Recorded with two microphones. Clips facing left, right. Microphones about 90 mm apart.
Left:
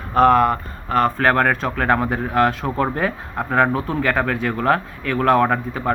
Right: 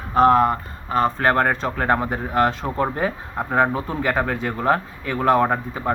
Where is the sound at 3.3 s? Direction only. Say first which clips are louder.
Left 2 dB; 15° right (ahead or behind).